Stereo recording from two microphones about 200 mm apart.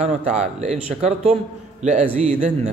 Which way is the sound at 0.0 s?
35° right (ahead or behind).